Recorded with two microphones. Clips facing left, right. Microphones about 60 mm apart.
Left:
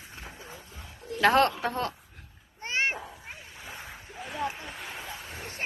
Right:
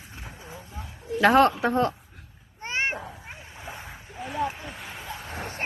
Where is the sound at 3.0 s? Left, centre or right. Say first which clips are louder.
Right 3 dB; right.